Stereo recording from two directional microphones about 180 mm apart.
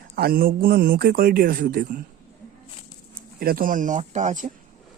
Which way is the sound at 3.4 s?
55° right (ahead or behind).